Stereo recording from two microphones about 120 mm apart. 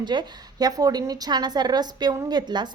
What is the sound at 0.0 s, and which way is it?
A woman's voice, 40° right (ahead or behind).